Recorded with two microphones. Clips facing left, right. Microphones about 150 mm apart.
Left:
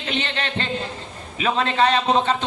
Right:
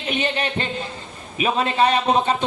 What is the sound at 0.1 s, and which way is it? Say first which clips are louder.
A man's voice: right 3 dB; 10° right (ahead or behind).